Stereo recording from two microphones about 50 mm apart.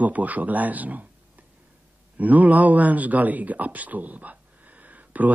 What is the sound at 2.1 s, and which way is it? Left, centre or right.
Speech, right.